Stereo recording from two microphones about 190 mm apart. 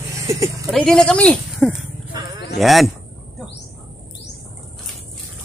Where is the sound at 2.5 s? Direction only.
Centre (ahead or behind).